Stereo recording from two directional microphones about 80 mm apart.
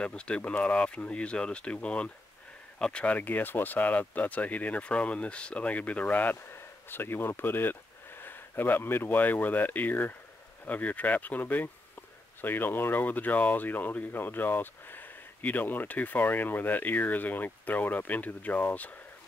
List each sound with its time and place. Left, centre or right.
0.0 s speech: centre